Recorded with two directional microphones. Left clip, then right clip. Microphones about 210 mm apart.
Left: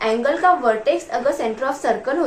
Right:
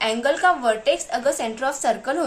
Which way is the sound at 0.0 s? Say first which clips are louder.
Left 2 dB; 30° right (ahead or behind).